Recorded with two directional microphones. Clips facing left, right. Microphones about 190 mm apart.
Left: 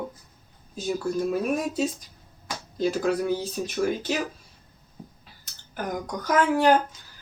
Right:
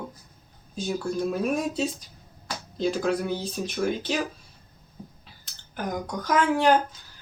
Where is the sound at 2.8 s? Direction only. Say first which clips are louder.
Left 1 dB; 10° left (ahead or behind).